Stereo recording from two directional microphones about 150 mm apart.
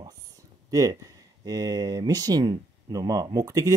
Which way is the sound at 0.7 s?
20° right (ahead or behind).